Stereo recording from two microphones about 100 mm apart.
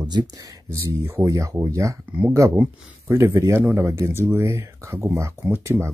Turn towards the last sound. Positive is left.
turn(degrees=-25)  # may be behind; listen again after turning